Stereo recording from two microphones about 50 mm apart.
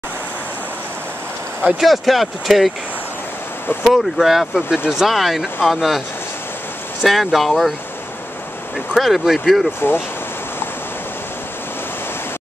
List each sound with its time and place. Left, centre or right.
1.8 s speech: centre
3.8 s speech: centre
4.6 s speech: centre
5.0 s speech: centre
8.9 s speech: centre
9.8 s speech: left